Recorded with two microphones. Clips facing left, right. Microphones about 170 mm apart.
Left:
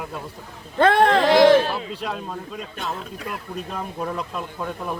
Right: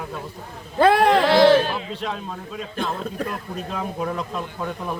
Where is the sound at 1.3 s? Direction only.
15° left (ahead or behind).